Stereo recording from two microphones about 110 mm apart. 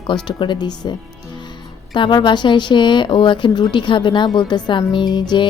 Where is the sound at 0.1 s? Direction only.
45° left (ahead or behind).